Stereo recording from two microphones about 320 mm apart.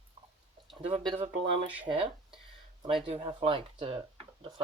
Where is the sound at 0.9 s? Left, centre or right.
Centre.